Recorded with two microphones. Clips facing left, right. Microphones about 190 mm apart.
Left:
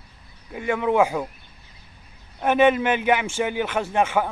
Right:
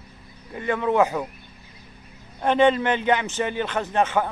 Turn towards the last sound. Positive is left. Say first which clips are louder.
# left 1 dB
turn(degrees=10)  # may be behind; listen again after turning